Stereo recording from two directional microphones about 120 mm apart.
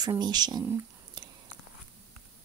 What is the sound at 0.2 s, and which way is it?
Speech, 35° right (ahead or behind).